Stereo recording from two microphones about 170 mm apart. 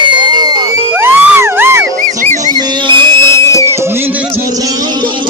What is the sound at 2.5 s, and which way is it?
Music, 25° right (ahead or behind).